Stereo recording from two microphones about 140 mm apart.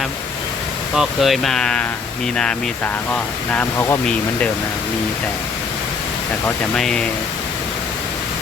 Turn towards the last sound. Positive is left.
turn(degrees=5)  # may be behind; listen again after turning